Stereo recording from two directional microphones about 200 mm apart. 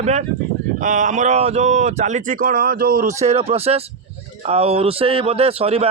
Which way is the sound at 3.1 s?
30° right (ahead or behind).